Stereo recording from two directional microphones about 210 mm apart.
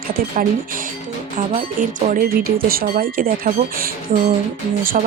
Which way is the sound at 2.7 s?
45° right (ahead or behind).